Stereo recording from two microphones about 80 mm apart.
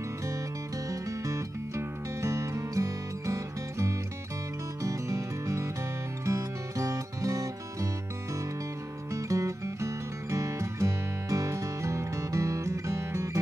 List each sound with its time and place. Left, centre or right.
0.8 s music: right
9.1 s music: right